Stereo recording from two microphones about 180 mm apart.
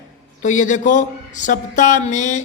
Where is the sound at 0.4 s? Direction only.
45° left (ahead or behind).